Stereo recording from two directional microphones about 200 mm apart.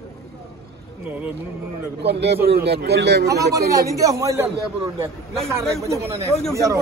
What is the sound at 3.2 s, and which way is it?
A man's voice, 15° right (ahead or behind).